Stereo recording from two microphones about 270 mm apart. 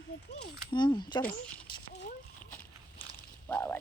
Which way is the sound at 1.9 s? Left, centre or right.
Left.